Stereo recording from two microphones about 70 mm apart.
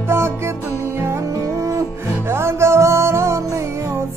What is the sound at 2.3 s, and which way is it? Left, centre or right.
Music, right.